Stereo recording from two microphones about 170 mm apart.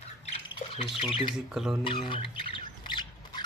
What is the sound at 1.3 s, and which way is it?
Speech, centre (ahead or behind).